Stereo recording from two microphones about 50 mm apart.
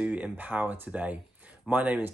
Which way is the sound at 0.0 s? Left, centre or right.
Right.